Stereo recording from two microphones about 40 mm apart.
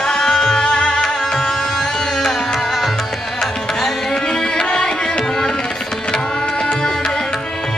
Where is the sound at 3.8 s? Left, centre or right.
Centre.